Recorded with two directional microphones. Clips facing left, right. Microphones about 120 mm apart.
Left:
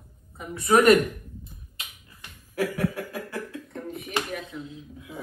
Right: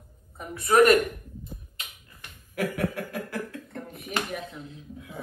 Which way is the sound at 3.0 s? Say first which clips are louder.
Even; 55° right (ahead or behind).